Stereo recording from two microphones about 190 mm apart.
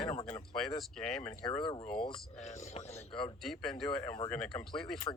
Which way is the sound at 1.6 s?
25° left (ahead or behind).